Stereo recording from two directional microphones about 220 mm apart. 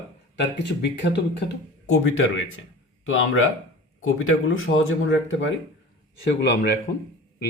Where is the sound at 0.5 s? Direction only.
50° left (ahead or behind); by 4.3 s 70° left (ahead or behind).